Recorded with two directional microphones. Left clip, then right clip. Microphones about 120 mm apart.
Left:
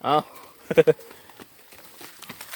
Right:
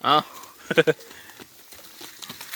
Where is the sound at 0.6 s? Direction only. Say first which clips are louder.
Left 2 dB; 15° left (ahead or behind).